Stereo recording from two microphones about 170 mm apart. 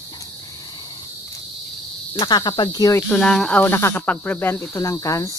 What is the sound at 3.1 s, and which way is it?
Speech, 5° left (ahead or behind).